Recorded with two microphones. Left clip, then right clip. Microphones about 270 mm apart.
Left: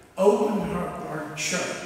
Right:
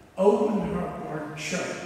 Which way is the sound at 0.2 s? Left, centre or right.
Centre.